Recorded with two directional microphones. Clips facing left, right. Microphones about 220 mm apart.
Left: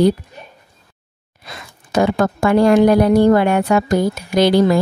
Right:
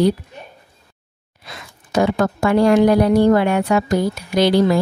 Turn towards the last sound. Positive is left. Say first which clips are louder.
# left 2 dB
turn(degrees=50)  # may be behind; listen again after turning